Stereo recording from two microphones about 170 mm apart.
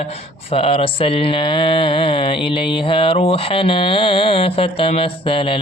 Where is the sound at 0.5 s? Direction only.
35° left (ahead or behind).